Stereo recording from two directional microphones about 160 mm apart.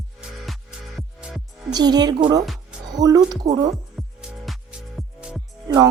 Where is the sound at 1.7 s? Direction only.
25° right (ahead or behind).